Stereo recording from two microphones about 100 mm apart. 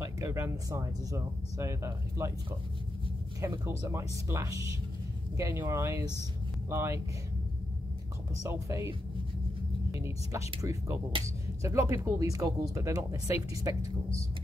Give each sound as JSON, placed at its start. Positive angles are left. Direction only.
{"t": 0.0, "sound": "speech", "side_deg": -25}
{"t": 3.3, "sound": "speech", "side_deg": -30}
{"t": 8.4, "sound": "speech", "side_deg": -30}
{"t": 9.9, "sound": "speech", "side_deg": -25}